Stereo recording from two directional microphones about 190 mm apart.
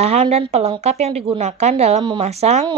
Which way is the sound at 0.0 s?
35° right (ahead or behind).